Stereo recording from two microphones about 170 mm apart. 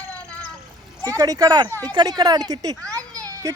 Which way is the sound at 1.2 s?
20° right (ahead or behind).